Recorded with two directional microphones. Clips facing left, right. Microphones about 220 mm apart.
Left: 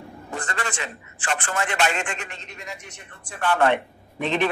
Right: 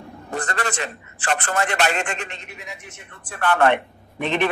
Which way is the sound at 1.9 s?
60° right (ahead or behind).